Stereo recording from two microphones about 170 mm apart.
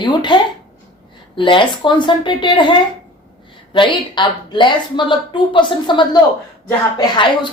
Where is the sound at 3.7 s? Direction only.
30° left (ahead or behind).